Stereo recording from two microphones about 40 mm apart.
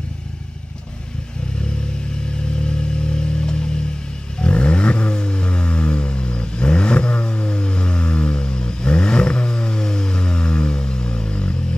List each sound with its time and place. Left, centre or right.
2.6 s vehicle: left